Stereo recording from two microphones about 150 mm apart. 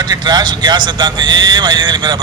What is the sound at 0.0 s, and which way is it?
A man's voice, 30° right (ahead or behind).